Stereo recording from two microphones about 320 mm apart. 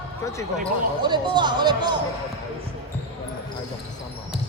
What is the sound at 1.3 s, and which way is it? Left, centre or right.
Speech, centre.